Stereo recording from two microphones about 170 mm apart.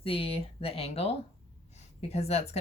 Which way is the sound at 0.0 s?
35° left (ahead or behind).